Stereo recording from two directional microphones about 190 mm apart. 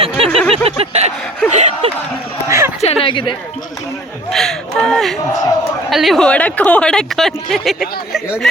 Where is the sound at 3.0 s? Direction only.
25° left (ahead or behind).